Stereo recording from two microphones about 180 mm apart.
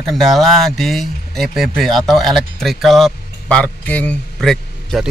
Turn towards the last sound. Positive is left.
turn(degrees=5)  # may be behind; listen again after turning